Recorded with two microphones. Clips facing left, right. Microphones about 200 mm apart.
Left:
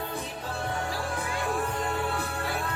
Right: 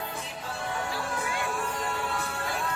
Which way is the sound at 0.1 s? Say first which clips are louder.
Left 3 dB; 35° left (ahead or behind).